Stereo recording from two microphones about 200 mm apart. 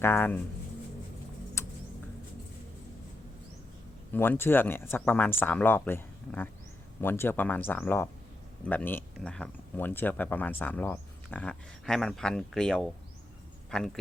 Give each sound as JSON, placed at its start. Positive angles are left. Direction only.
{"t": 0.0, "sound": "speech", "side_deg": 10}
{"t": 1.6, "sound": "a sound", "side_deg": 15}
{"t": 4.1, "sound": "speech", "side_deg": 10}